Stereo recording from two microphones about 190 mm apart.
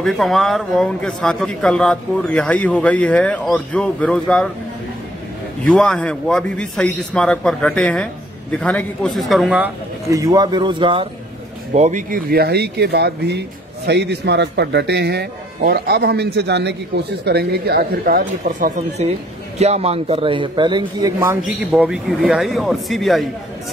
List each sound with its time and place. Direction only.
0.0 s a man's voice: centre (ahead or behind)
5.7 s a man's voice: 5° left (ahead or behind)
10.1 s a man's voice: 20° right (ahead or behind)
11.7 s a man's voice: 40° right (ahead or behind)
21.7 s a man's voice: 5° right (ahead or behind)